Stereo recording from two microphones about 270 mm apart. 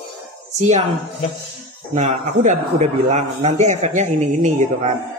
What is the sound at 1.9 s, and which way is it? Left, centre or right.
A man's voice, right.